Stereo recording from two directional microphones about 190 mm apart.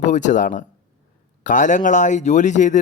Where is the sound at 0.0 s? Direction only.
40° left (ahead or behind).